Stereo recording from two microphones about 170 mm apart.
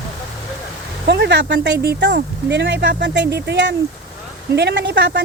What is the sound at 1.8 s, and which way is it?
A woman's voice, 70° right (ahead or behind).